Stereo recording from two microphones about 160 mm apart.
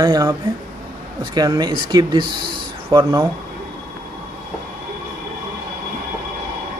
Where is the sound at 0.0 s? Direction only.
20° right (ahead or behind).